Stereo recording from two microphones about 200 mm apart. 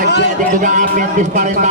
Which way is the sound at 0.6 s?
40° right (ahead or behind).